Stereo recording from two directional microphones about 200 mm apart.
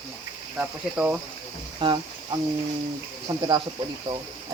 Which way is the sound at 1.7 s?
25° right (ahead or behind).